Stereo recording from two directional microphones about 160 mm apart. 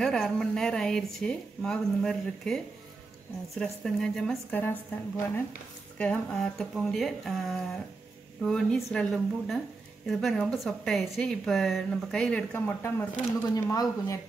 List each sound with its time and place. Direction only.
0.0 s a woman's voice: 5° left (ahead or behind); by 14.2 s 20° left (ahead or behind)